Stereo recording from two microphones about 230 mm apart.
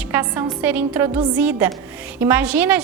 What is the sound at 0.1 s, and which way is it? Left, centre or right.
A woman's voice, centre.